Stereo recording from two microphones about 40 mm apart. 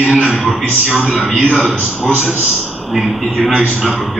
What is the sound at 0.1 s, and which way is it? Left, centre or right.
Speech, right.